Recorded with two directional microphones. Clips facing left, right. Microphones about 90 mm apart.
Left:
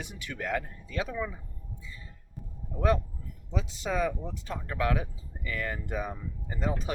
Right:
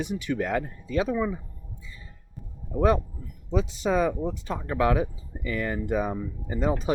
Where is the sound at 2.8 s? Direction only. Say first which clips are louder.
Right 5 dB; 30° right (ahead or behind).